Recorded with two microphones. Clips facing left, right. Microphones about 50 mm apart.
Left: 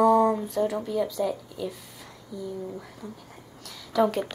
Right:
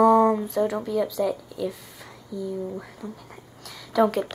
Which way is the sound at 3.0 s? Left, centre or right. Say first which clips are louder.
Right 3 dB; right.